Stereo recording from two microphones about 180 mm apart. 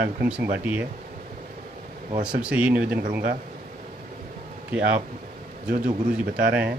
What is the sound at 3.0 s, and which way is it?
Speech, 55° right (ahead or behind).